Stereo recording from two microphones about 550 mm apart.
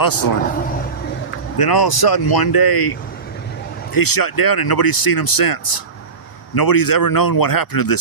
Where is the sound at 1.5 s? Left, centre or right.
Left.